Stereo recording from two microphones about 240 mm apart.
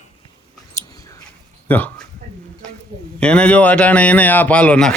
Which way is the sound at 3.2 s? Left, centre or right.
Centre.